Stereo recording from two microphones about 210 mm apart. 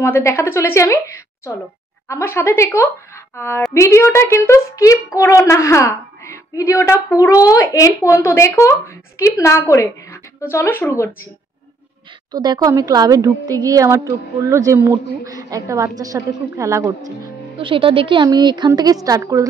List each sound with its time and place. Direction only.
0.0 s a woman's voice: 15° left (ahead or behind)
12.3 s a woman's voice: 20° right (ahead or behind)
17.6 s a woman's voice: 25° right (ahead or behind)